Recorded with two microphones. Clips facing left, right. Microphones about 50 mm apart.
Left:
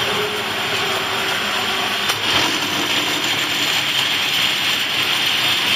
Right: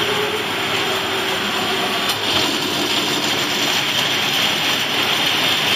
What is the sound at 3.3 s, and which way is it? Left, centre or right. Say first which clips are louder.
Vehicle: even; centre.